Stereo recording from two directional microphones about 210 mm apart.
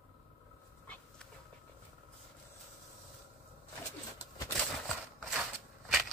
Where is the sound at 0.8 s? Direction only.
5° left (ahead or behind).